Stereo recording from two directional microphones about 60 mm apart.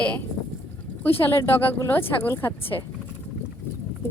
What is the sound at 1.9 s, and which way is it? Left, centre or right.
Speech, left.